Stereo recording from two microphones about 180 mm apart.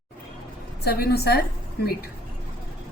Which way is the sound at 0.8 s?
60° left (ahead or behind).